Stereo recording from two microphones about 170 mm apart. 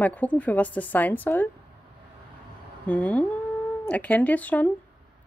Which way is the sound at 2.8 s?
10° left (ahead or behind).